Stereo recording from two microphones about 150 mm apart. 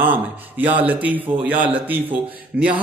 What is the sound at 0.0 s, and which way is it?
Speech, 10° right (ahead or behind).